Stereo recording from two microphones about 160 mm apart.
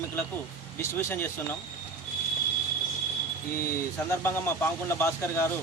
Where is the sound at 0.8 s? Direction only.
15° left (ahead or behind).